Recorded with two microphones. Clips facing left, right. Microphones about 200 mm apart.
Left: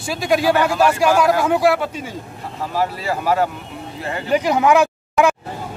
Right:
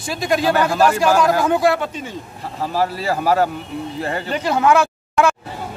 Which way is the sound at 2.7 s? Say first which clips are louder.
Right 1 dB; 35° right (ahead or behind).